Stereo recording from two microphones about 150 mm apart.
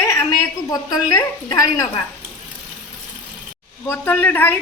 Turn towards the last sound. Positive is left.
turn(degrees=15)  # may be behind; listen again after turning